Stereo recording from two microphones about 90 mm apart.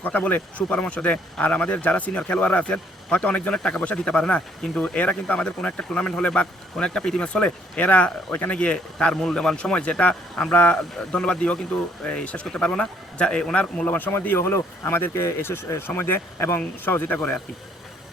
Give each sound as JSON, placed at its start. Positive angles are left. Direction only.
{"t": 0.0, "sound": "speech", "side_deg": 20}